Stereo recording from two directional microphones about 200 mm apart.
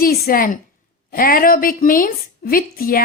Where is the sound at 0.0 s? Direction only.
45° left (ahead or behind).